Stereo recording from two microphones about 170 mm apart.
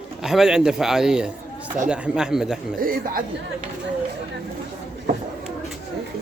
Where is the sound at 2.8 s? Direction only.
55° right (ahead or behind).